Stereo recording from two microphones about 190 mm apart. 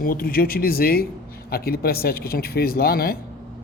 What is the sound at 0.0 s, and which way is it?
Speech, 50° left (ahead or behind).